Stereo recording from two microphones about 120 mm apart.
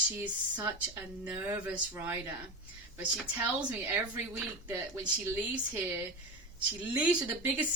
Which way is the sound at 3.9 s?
15° right (ahead or behind).